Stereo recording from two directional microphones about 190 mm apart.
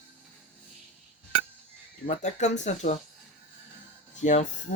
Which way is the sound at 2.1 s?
40° left (ahead or behind).